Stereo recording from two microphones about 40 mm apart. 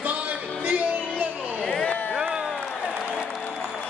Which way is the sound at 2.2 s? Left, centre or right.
Right.